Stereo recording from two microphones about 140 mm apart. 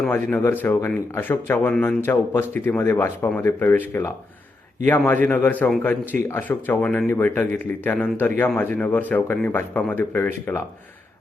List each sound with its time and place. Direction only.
0.0 s speech: 5° left (ahead or behind)